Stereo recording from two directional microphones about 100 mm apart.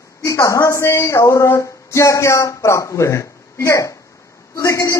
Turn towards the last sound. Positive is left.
turn(degrees=30)  # may be behind; listen again after turning